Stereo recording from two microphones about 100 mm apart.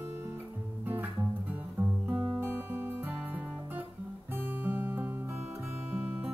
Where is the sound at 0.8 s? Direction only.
20° right (ahead or behind).